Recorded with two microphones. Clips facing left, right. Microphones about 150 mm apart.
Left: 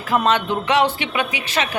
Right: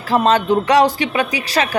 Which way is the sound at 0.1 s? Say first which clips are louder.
Right 4 dB; 35° right (ahead or behind).